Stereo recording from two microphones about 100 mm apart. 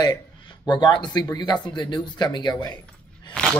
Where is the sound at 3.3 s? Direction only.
5° left (ahead or behind).